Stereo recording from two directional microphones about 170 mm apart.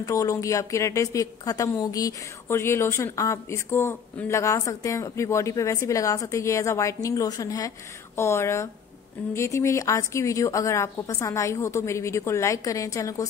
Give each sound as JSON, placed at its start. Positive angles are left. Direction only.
{"t": 0.0, "sound": "a woman's voice", "side_deg": 20}